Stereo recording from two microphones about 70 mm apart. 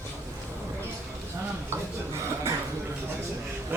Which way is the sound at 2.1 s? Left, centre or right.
Right.